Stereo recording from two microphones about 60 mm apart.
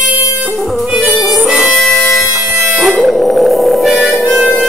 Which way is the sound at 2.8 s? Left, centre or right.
Centre.